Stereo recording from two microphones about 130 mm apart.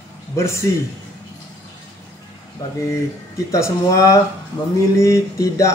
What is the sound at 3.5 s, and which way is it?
Speech, 25° left (ahead or behind).